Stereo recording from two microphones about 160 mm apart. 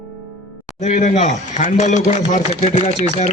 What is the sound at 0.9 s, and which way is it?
Speech, 55° left (ahead or behind).